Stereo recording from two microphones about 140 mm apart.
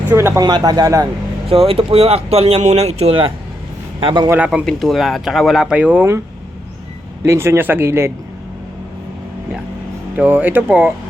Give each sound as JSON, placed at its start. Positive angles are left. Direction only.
{"t": 0.1, "sound": "speech", "side_deg": -20}
{"t": 1.5, "sound": "a man's voice", "side_deg": -45}
{"t": 4.3, "sound": "speech", "side_deg": -10}
{"t": 7.3, "sound": "speech", "side_deg": -20}
{"t": 10.2, "sound": "speech", "side_deg": -10}